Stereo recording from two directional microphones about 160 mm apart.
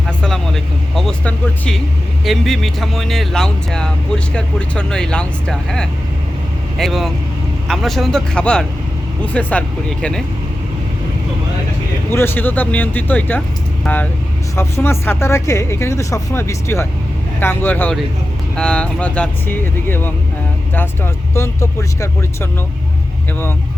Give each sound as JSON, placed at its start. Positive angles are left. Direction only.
{"t": 0.2, "sound": "speech", "side_deg": 5}
{"t": 12.1, "sound": "speech", "side_deg": 15}